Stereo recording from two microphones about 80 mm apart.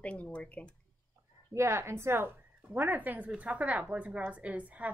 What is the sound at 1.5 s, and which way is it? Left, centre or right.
A woman's voice, right.